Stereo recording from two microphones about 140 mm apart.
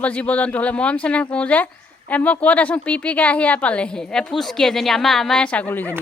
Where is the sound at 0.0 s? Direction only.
10° left (ahead or behind).